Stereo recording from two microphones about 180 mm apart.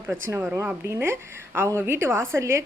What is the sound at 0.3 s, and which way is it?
A woman's voice, 15° right (ahead or behind).